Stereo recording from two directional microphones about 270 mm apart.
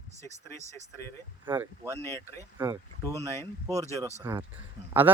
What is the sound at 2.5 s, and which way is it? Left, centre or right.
Speech, centre.